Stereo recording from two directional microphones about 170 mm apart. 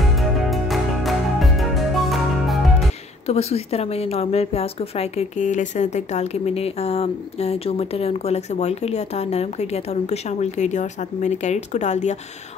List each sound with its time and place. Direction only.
0.0 s music: centre (ahead or behind)
3.3 s a woman's voice: 40° left (ahead or behind)